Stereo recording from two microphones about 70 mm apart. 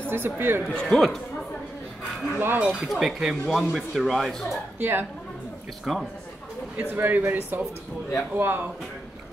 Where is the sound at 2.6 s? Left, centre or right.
Centre.